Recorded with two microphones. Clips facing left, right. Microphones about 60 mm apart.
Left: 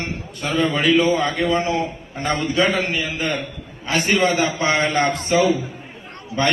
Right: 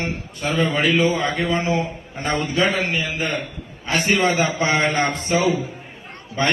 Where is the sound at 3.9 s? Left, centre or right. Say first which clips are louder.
Left 1 dB; centre.